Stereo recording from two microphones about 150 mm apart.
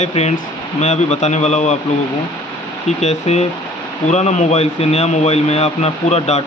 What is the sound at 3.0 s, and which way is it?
Speech, 45° left (ahead or behind).